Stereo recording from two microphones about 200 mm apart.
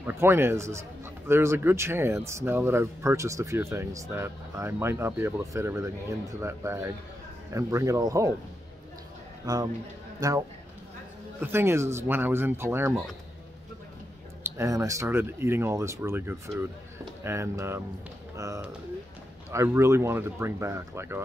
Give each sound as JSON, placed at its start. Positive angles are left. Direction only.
{"t": 0.0, "sound": "a man's voice", "side_deg": -10}
{"t": 9.5, "sound": "a man's voice", "side_deg": -20}
{"t": 11.4, "sound": "a man's voice", "side_deg": -10}
{"t": 14.6, "sound": "a man's voice", "side_deg": -15}